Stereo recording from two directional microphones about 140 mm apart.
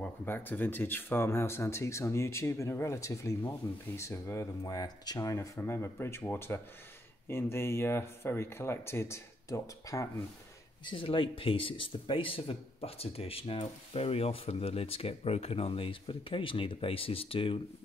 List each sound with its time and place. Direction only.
0.0 s speech: 15° left (ahead or behind)
10.9 s speech: 40° left (ahead or behind)